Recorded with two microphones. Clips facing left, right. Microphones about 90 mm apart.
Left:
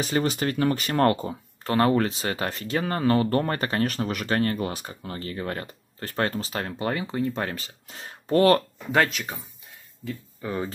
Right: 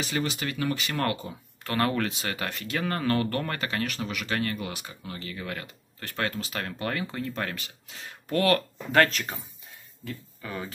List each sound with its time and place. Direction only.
0.0 s speech: 40° left (ahead or behind)
1.7 s speech: 25° left (ahead or behind)
3.3 s speech: 35° left (ahead or behind)
8.9 s speech: 10° left (ahead or behind)
10.4 s speech: 25° left (ahead or behind)